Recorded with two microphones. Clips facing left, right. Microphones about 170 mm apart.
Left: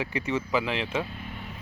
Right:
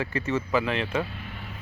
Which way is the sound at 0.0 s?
15° left (ahead or behind).